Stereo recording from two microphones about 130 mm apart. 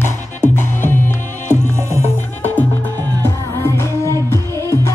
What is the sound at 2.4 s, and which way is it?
Music, 15° left (ahead or behind).